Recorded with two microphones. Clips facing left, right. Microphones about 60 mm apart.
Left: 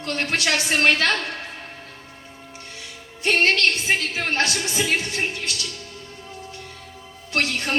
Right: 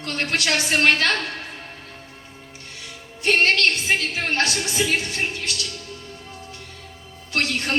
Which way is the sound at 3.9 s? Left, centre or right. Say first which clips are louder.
Even; left.